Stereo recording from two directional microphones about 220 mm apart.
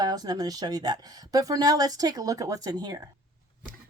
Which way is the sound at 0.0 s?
20° right (ahead or behind).